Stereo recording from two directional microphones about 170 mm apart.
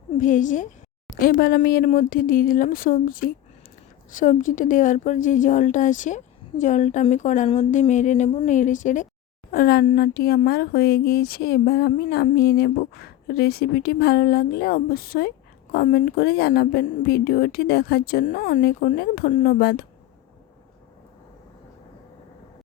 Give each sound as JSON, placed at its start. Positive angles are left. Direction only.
{"t": 0.2, "sound": "a woman's voice", "side_deg": 50}
{"t": 7.4, "sound": "a woman's voice", "side_deg": 35}
{"t": 7.7, "sound": "a woman's voice", "side_deg": 45}
{"t": 9.5, "sound": "speech", "side_deg": 60}